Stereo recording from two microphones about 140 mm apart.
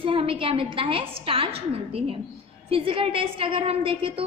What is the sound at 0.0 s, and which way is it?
A woman's voice, 40° right (ahead or behind).